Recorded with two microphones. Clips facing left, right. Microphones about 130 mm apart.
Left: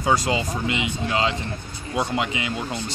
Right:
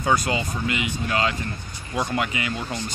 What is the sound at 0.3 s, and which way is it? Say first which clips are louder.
Speech: left 2 dB; 25° left (ahead or behind).